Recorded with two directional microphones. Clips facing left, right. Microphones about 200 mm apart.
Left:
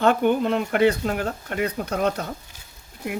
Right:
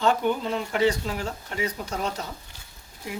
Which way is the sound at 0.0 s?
60° left (ahead or behind).